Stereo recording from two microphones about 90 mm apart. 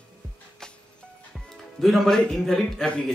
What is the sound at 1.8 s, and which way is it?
A man's voice, centre (ahead or behind).